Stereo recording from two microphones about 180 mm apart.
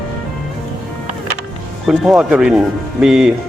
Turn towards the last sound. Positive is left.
turn(degrees=-5)  # may be behind; listen again after turning